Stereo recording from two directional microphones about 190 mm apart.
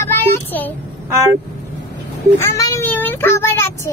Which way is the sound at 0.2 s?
10° left (ahead or behind).